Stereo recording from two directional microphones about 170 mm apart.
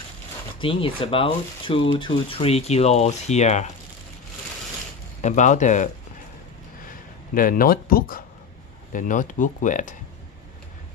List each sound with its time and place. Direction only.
0.6 s speech: 30° left (ahead or behind)
5.2 s speech: 45° left (ahead or behind)
6.9 s speech: 55° left (ahead or behind)